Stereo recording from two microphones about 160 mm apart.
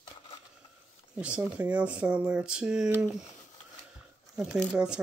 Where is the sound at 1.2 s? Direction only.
5° right (ahead or behind).